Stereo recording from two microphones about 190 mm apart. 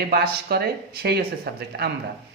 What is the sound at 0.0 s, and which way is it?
A man's voice, 55° right (ahead or behind).